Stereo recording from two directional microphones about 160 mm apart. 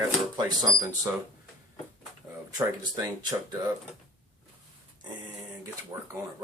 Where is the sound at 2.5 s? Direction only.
25° right (ahead or behind).